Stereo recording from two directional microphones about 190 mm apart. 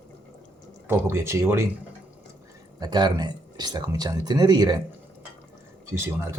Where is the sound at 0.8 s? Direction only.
15° right (ahead or behind).